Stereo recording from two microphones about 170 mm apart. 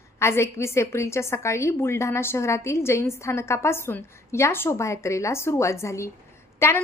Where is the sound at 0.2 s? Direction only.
15° left (ahead or behind).